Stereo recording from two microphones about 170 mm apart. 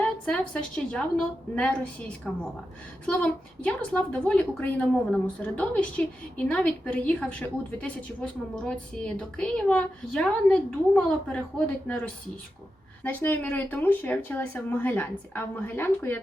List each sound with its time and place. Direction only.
0.0 s a sound: 5° left (ahead or behind)
0.9 s a woman's voice: 5° left (ahead or behind)
13.1 s a woman's voice: 10° left (ahead or behind)